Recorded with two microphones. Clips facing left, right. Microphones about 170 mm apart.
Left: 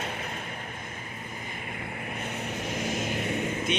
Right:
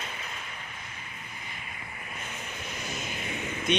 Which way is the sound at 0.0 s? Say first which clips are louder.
Left 6 dB; 55° left (ahead or behind).